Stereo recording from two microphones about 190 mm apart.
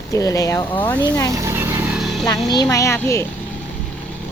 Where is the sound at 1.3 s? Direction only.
15° right (ahead or behind).